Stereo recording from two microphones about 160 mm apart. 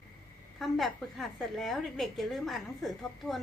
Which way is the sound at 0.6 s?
Centre (ahead or behind).